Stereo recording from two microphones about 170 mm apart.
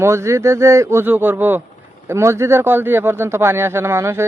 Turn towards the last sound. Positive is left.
turn(degrees=-15)  # may be behind; listen again after turning